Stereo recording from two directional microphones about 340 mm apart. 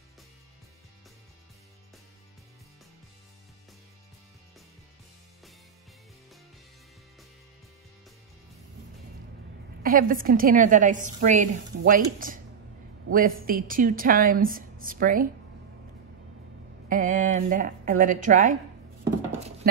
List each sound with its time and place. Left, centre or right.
9.8 s a woman's voice: right
13.5 s a woman's voice: right
16.9 s a woman's voice: right
19.6 s horse: right